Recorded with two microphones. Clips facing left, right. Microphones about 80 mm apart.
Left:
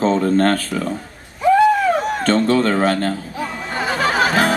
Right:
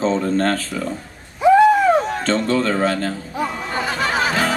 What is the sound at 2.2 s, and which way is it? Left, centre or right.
Speech, left.